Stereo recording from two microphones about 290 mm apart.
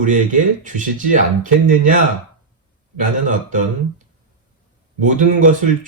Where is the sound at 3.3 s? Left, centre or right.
Right.